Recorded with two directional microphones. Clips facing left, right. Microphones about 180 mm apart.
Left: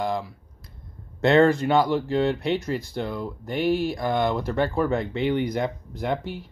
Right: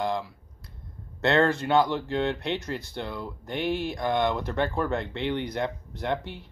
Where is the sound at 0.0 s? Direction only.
10° left (ahead or behind).